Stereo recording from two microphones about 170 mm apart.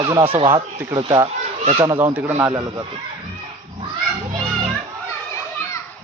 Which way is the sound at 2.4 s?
20° right (ahead or behind).